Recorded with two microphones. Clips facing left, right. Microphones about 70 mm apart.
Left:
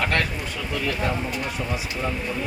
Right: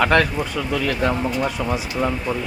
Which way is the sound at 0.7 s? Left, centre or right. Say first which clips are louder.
Right 4 dB; right.